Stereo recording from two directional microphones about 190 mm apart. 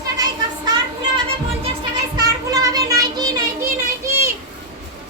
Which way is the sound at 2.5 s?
20° right (ahead or behind).